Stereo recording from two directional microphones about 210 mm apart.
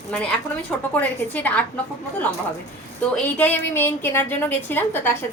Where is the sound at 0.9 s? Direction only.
10° left (ahead or behind).